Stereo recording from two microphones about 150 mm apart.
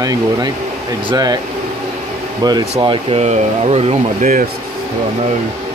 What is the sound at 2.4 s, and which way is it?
Speech, 25° right (ahead or behind).